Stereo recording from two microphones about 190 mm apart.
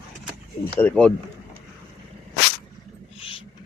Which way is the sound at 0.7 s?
5° left (ahead or behind).